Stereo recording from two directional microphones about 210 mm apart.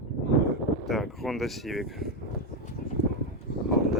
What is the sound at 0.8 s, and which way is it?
Speech, centre (ahead or behind).